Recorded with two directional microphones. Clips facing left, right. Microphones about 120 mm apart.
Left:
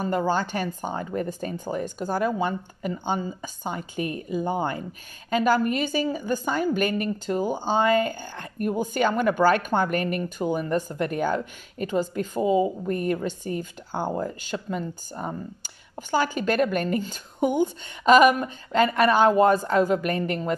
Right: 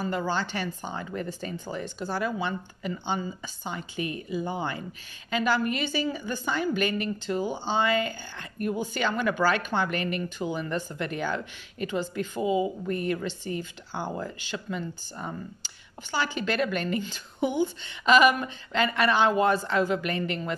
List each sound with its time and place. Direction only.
0.3 s speech: 45° left (ahead or behind)